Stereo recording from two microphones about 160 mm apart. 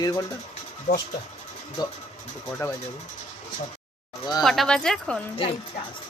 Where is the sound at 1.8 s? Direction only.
25° left (ahead or behind).